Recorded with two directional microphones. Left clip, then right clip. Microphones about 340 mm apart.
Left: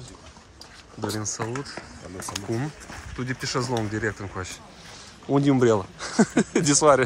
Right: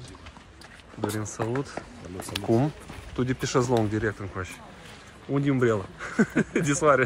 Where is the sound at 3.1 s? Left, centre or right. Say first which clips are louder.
Right 3 dB; centre.